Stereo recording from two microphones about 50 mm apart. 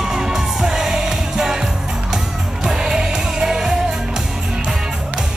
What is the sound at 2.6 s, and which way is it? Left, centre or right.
Music, centre.